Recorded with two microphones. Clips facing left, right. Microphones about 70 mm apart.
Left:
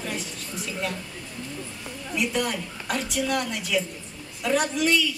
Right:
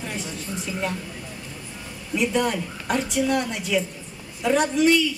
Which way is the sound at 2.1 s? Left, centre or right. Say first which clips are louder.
Right 4 dB; centre.